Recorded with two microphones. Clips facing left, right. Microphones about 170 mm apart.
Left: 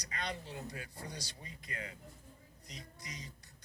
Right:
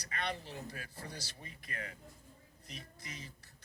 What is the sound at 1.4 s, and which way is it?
Speech, 20° left (ahead or behind).